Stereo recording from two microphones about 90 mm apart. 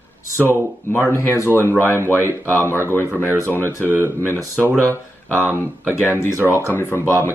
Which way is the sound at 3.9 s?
25° right (ahead or behind).